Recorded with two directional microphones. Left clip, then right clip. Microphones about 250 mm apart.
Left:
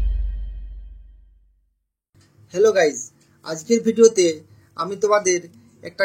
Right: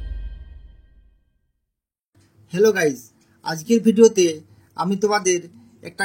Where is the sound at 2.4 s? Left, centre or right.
Right.